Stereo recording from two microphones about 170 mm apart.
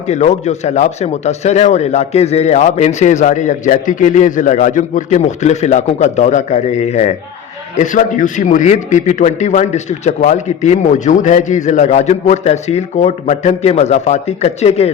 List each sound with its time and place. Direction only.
0.1 s a man's voice: 40° left (ahead or behind)